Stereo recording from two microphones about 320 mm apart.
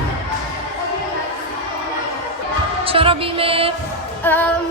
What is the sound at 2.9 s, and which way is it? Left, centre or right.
Music, centre.